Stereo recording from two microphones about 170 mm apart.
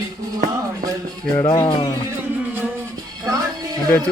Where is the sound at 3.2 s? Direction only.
25° right (ahead or behind).